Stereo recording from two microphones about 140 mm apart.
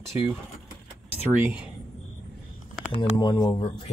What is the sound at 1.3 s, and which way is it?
Speech, 10° right (ahead or behind).